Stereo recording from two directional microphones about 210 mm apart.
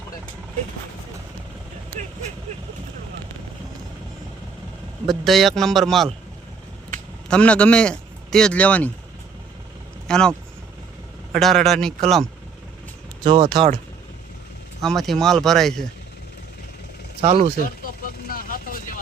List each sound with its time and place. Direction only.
5.0 s speech: centre (ahead or behind)
7.3 s speech: 5° left (ahead or behind)
10.1 s speech: 5° left (ahead or behind)
13.2 s speech: 25° right (ahead or behind)
14.8 s speech: centre (ahead or behind)
18.3 s vehicle: 40° left (ahead or behind)